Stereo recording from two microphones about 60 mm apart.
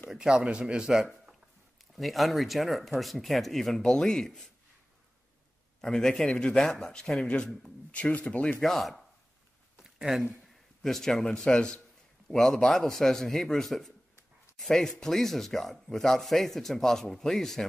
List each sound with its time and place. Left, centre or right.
0.1 s speech: centre
1.8 s speech: centre
5.8 s a man's voice: centre
8.6 s speech: centre
9.8 s a sound: centre
10.3 s a man's voice: centre